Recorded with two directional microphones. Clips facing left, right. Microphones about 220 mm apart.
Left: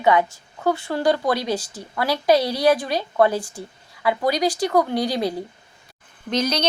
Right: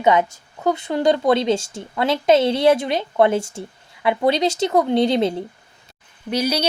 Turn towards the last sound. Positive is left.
turn(degrees=-10)  # may be behind; listen again after turning